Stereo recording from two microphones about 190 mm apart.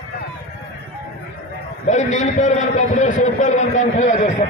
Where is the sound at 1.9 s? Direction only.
40° left (ahead or behind).